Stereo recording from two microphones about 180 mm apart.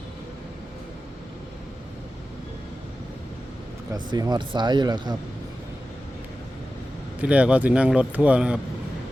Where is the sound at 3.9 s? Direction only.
20° right (ahead or behind).